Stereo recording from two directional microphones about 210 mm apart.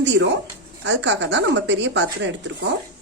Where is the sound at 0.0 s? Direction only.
55° right (ahead or behind).